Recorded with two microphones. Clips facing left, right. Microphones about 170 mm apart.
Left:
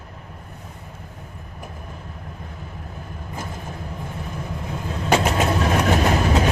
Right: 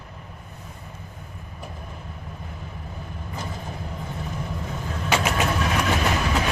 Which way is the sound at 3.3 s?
45° left (ahead or behind).